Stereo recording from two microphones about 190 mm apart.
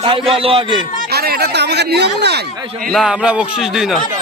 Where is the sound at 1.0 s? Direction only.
55° right (ahead or behind).